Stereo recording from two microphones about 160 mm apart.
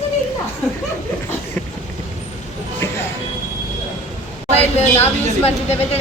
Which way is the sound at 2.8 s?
15° left (ahead or behind).